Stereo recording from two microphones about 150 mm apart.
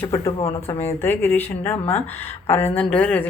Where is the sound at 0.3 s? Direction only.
45° left (ahead or behind).